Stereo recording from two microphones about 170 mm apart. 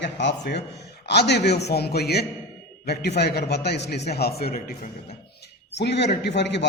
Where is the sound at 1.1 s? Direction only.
75° left (ahead or behind).